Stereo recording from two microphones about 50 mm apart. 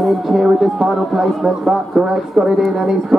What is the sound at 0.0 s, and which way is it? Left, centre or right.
A man's voice, centre.